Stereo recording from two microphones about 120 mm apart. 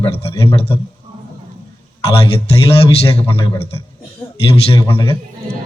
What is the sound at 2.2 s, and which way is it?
A man's voice, 55° left (ahead or behind).